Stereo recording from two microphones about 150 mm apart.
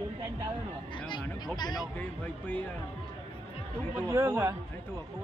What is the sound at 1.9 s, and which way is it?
Speech, 10° left (ahead or behind).